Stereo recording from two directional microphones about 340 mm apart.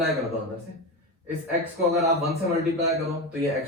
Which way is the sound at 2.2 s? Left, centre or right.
Centre.